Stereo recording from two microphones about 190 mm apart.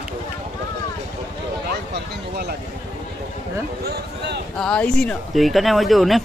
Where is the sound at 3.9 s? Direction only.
60° right (ahead or behind).